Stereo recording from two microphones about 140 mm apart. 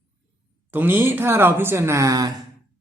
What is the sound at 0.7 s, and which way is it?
A woman's voice, 15° right (ahead or behind).